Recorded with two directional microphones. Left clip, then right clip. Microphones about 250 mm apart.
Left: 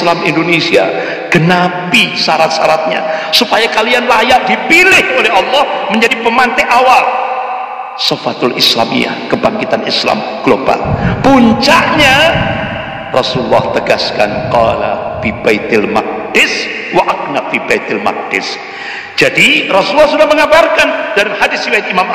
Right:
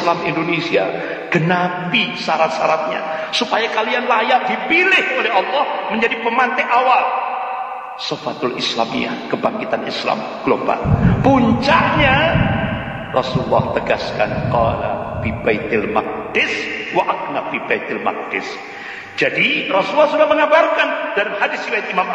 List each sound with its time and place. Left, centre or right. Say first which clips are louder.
0.0 s a man's voice: left 7 dB; left
8.0 s a man's voice: left 10 dB; left
17.6 s a man's voice: left 7 dB; left